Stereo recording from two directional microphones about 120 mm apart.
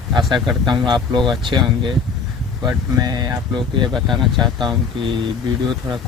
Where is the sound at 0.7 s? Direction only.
40° right (ahead or behind).